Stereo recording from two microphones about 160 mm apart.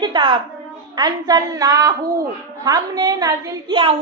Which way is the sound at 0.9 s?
25° right (ahead or behind).